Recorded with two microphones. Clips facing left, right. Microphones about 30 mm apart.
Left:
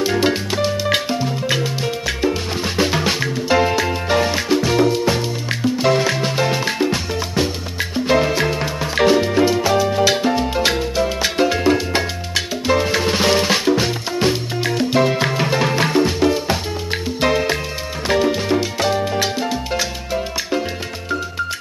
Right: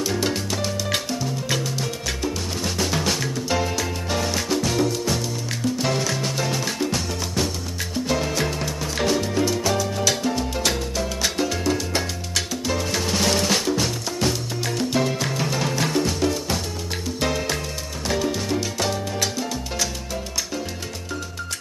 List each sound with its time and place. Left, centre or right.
0.0 s music: left